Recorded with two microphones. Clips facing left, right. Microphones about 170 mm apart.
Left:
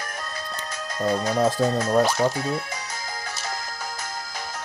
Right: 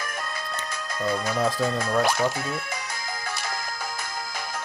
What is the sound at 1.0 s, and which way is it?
Speech, 35° left (ahead or behind).